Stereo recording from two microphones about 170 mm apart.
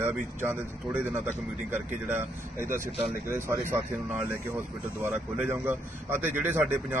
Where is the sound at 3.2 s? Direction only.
15° right (ahead or behind).